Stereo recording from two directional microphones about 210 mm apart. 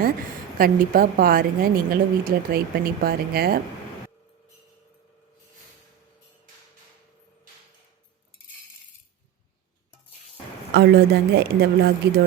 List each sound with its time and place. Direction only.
0.0 s a woman's voice: 40° right (ahead or behind)
10.8 s a woman's voice: 50° right (ahead or behind)